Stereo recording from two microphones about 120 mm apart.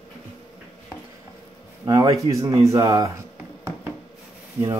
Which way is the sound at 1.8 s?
30° right (ahead or behind).